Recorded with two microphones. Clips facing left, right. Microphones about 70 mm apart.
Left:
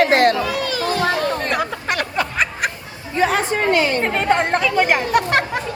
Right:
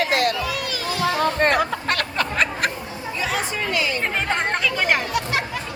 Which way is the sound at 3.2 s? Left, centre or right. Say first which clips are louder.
Left 8 dB; left.